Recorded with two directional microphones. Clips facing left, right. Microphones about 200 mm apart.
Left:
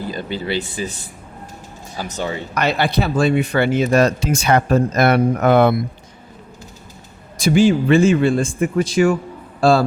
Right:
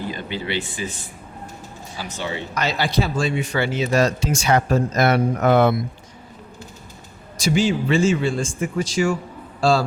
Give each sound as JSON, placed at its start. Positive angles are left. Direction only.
{"t": 0.1, "sound": "speech", "side_deg": 40}
{"t": 2.0, "sound": "speech", "side_deg": 40}
{"t": 2.6, "sound": "speech", "side_deg": 60}
{"t": 7.3, "sound": "a man's voice", "side_deg": 55}